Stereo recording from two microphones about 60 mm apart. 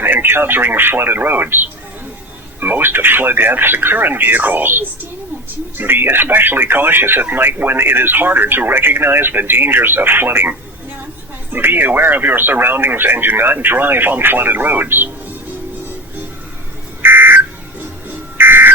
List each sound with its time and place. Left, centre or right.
0.0 s speech: right
11.5 s speech: right
17.0 s music: right
18.3 s buzzer: right